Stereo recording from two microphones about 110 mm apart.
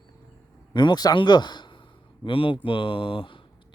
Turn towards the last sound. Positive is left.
turn(degrees=50)  # may be behind; listen again after turning